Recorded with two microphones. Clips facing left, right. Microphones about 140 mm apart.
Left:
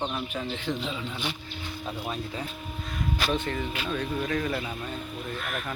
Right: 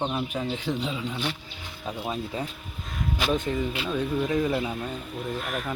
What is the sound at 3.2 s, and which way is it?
Speech, 15° right (ahead or behind).